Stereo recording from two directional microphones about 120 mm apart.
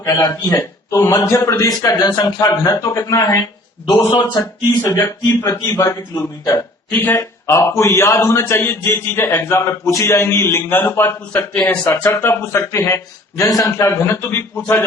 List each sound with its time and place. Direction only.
0.0 s speech: 35° left (ahead or behind)
0.4 s speech: 25° left (ahead or behind)
7.2 s speech: 25° left (ahead or behind)